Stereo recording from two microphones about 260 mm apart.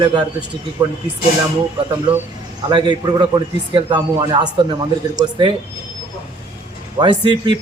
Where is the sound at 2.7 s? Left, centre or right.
Centre.